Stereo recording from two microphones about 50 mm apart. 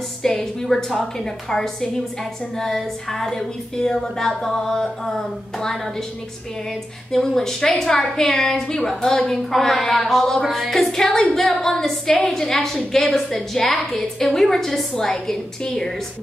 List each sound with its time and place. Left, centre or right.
0.2 s a woman's voice: centre
7.3 s a woman's voice: centre